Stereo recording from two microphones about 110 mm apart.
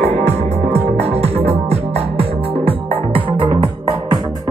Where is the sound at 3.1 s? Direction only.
50° right (ahead or behind).